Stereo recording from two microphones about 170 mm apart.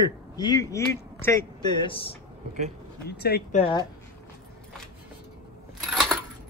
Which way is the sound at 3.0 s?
70° left (ahead or behind).